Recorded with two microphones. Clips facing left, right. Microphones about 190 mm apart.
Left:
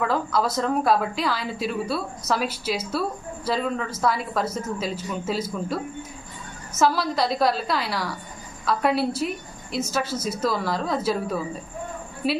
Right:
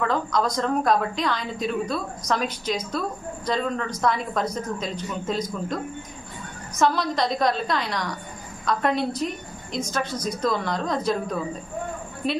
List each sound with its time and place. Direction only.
0.0 s a woman's voice: 5° left (ahead or behind)